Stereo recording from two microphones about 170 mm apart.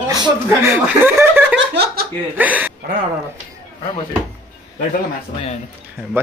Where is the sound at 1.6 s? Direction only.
70° right (ahead or behind).